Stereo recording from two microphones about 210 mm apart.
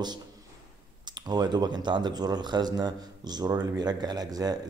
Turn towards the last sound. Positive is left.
turn(degrees=-20)  # may be behind; listen again after turning